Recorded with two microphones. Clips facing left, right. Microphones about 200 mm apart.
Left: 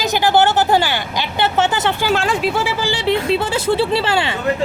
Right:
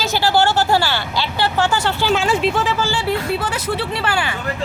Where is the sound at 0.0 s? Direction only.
15° left (ahead or behind).